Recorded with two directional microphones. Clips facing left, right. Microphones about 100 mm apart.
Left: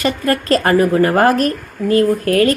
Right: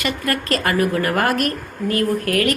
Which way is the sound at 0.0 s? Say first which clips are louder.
Left 6 dB; 30° left (ahead or behind).